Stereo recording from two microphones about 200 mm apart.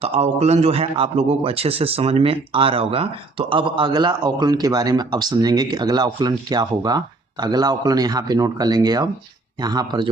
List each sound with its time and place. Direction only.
0.0 s a man's voice: 30° right (ahead or behind)